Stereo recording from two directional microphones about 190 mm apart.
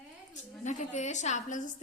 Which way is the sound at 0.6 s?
40° left (ahead or behind).